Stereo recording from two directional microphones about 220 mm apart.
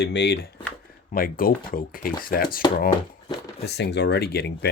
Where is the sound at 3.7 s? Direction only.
50° left (ahead or behind).